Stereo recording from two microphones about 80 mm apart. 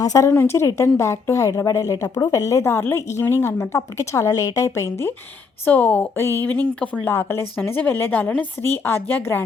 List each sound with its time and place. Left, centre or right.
0.0 s a woman's voice: left
0.3 s a woman's voice: left
5.6 s a woman's voice: centre